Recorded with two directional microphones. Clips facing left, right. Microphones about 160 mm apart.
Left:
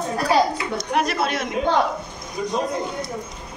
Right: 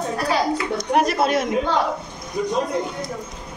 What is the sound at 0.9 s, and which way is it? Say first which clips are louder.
Speech: right 4 dB; 40° right (ahead or behind).